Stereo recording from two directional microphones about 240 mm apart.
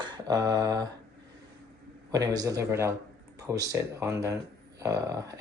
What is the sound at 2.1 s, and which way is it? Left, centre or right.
Speech, centre.